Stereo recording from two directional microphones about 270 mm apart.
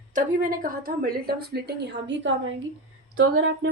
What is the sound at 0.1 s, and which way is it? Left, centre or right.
A woman's voice, right.